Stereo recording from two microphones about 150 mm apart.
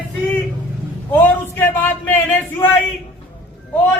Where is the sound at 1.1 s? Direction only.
10° left (ahead or behind).